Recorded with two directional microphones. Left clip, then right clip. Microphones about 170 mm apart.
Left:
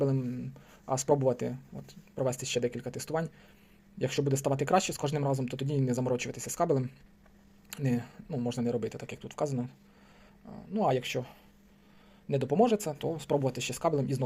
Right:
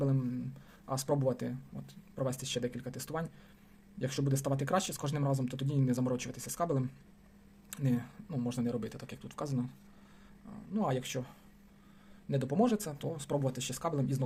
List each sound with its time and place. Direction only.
0.0 s speech: 30° left (ahead or behind)